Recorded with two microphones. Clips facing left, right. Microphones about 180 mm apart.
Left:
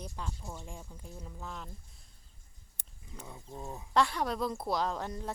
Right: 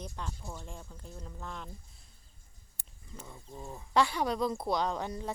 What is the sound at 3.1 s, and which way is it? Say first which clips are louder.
Speech: left 1 dB; centre (ahead or behind).